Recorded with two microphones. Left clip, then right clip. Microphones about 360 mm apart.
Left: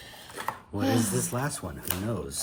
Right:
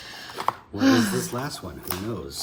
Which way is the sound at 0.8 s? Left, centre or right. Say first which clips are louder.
Right 7 dB; centre.